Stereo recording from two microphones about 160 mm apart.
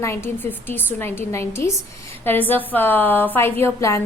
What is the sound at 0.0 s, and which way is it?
A woman's voice, 15° left (ahead or behind).